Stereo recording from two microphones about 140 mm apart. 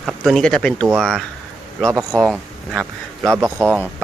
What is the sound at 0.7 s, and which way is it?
Speech, 20° right (ahead or behind).